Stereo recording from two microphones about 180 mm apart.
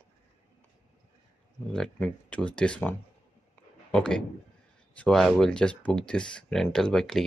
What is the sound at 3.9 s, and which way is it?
Speech, 5° left (ahead or behind).